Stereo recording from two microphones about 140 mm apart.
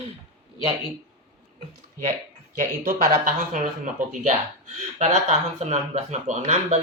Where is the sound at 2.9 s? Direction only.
60° right (ahead or behind).